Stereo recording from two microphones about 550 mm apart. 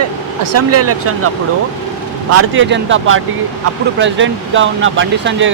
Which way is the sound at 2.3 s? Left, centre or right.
Right.